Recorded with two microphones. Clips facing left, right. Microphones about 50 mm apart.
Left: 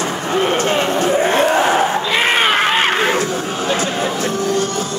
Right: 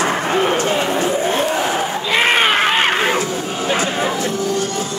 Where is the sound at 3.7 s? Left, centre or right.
Right.